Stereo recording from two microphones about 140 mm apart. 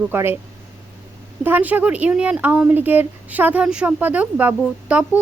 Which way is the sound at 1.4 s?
15° right (ahead or behind).